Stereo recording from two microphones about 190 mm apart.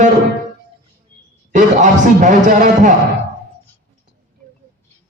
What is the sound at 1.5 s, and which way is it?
A man's voice, 40° right (ahead or behind).